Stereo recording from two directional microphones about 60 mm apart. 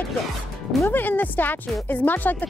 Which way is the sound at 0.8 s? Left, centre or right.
Left.